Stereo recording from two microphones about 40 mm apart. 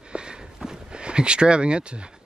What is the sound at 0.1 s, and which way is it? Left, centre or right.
Walk, right.